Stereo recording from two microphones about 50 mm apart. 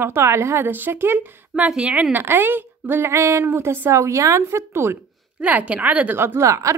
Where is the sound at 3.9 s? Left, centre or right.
Right.